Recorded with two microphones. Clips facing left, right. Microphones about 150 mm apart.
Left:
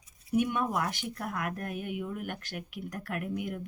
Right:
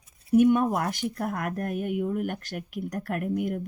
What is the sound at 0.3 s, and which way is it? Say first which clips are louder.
A woman's voice: right 9 dB; 45° right (ahead or behind).